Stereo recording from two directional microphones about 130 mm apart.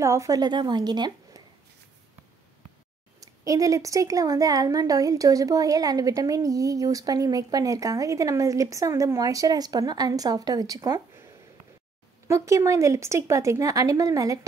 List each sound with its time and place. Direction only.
0.0 s a woman's voice: 25° right (ahead or behind)
3.2 s a woman's voice: 25° right (ahead or behind)
12.3 s a woman's voice: 25° right (ahead or behind)